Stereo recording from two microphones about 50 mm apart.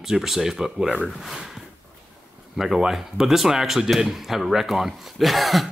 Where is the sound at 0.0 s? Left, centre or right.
Centre.